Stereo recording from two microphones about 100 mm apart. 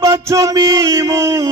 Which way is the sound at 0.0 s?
30° right (ahead or behind).